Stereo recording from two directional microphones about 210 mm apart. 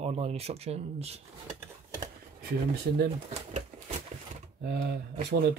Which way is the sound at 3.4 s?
30° right (ahead or behind).